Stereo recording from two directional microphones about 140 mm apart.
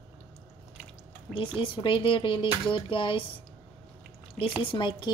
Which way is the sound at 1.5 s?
40° left (ahead or behind).